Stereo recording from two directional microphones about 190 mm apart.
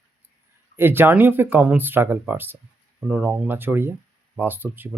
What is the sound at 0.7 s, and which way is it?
Speech, 10° right (ahead or behind).